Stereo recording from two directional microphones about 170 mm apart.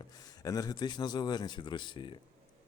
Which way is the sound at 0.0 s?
20° left (ahead or behind).